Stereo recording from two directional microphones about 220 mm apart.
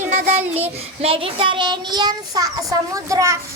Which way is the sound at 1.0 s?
25° right (ahead or behind).